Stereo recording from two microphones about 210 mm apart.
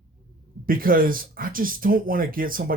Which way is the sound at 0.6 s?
45° right (ahead or behind).